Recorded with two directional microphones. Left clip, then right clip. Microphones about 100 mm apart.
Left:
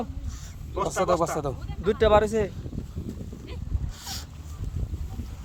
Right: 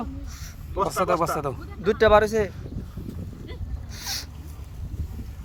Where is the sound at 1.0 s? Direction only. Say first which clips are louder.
Right 1 dB; 35° left (ahead or behind).